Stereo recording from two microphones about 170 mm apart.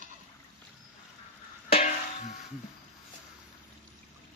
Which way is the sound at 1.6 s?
40° left (ahead or behind).